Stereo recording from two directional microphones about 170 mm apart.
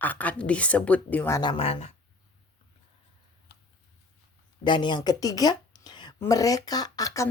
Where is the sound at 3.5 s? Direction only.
75° left (ahead or behind).